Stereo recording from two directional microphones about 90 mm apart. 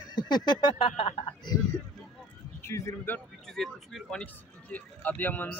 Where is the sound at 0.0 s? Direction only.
55° left (ahead or behind); by 1.0 s 75° left (ahead or behind).